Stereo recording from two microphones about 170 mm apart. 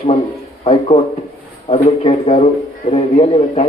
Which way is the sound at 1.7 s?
35° left (ahead or behind).